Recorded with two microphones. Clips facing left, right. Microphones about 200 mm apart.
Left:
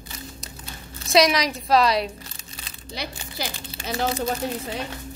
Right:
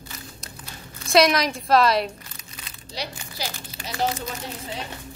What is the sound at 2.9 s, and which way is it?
Speech, 55° left (ahead or behind).